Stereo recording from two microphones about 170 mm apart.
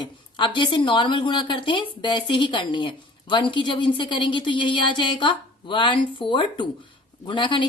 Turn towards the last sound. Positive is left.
turn(degrees=30)  # may be behind; listen again after turning